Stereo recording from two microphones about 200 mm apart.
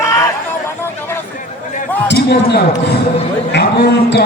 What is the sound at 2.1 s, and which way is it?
Speech, 55° left (ahead or behind).